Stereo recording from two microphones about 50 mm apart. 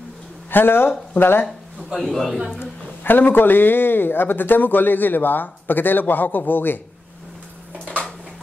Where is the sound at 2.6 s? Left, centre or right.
Left.